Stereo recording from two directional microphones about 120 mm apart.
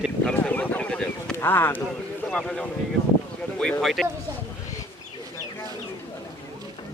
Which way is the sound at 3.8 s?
Centre (ahead or behind).